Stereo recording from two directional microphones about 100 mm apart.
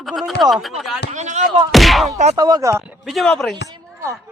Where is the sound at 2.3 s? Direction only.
40° right (ahead or behind).